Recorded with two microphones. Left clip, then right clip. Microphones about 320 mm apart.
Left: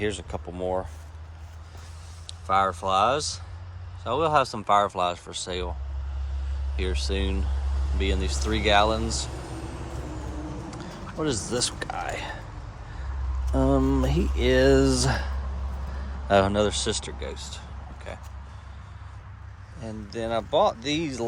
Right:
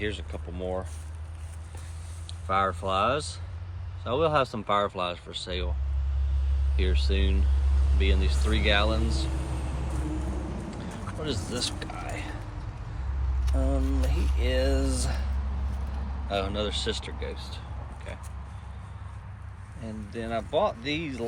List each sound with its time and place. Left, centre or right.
0.0 s speech: centre
2.5 s speech: centre
6.7 s speech: centre
9.0 s speech: left
11.2 s speech: left
13.4 s speech: left
16.3 s speech: left
19.8 s speech: centre